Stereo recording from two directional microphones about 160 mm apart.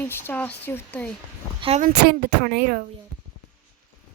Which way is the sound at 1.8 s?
70° right (ahead or behind).